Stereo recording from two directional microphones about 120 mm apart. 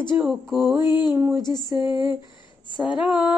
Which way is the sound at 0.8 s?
40° left (ahead or behind).